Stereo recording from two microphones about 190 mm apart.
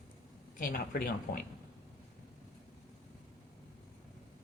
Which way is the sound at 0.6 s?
45° left (ahead or behind).